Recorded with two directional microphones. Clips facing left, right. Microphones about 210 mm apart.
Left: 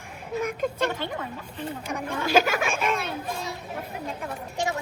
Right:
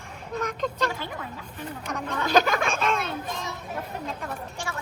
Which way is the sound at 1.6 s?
10° left (ahead or behind).